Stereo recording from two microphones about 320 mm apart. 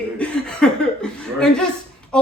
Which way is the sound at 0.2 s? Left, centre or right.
Centre.